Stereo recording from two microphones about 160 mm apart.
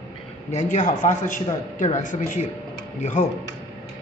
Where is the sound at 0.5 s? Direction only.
50° left (ahead or behind).